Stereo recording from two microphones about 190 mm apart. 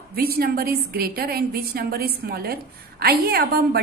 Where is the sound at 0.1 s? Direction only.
50° right (ahead or behind).